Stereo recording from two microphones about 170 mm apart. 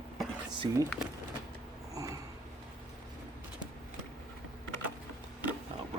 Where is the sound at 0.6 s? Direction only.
20° right (ahead or behind).